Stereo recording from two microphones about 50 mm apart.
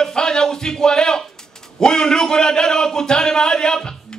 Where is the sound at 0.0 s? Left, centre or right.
Centre.